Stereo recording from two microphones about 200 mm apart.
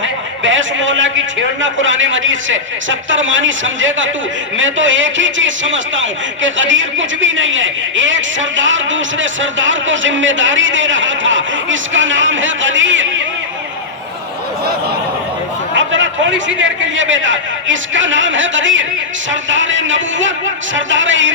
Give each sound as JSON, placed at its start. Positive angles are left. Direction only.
{"t": 0.0, "sound": "a man's voice", "side_deg": -70}
{"t": 15.7, "sound": "a man's voice", "side_deg": -70}